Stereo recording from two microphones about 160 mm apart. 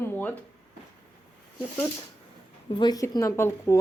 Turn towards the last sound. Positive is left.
turn(degrees=15)  # may be behind; listen again after turning